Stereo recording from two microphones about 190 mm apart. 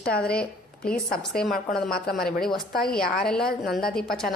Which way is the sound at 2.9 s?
50° left (ahead or behind).